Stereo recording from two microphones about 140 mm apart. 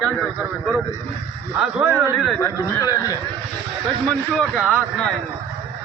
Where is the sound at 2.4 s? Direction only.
25° left (ahead or behind).